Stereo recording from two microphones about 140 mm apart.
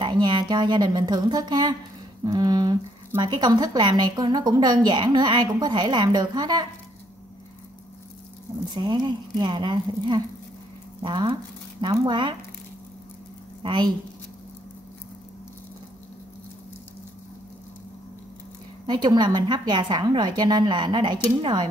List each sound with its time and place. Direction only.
0.0 s a woman's voice: 35° right (ahead or behind)
2.2 s a sound: 25° right (ahead or behind)
3.2 s a woman's voice: 30° right (ahead or behind)
8.7 s a woman's voice: 30° right (ahead or behind)
13.6 s speech: 35° right (ahead or behind)
18.9 s a woman's voice: 30° right (ahead or behind)